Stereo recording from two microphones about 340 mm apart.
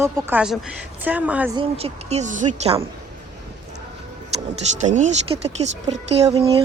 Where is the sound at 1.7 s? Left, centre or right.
Centre.